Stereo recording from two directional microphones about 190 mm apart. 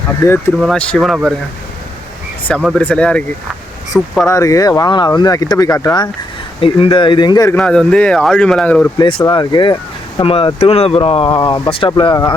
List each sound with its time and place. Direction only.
0.6 s speech: 5° left (ahead or behind)
2.7 s speech: 5° left (ahead or behind)
4.3 s speech: 15° left (ahead or behind)
7.5 s speech: 5° left (ahead or behind)
9.0 s speech: 25° left (ahead or behind)